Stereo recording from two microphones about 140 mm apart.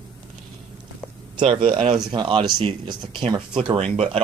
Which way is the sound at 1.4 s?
40° right (ahead or behind).